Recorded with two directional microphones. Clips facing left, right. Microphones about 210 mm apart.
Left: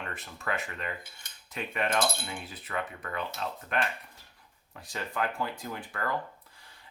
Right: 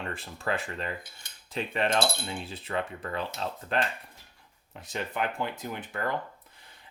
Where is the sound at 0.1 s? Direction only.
30° right (ahead or behind).